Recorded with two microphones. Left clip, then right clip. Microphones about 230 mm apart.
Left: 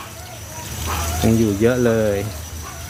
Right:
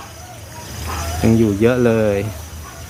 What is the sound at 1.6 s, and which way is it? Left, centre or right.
Speech, centre.